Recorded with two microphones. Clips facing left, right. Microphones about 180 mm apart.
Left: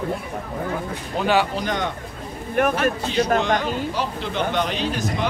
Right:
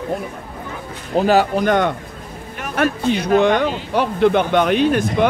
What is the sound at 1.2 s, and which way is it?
Speech, 40° right (ahead or behind).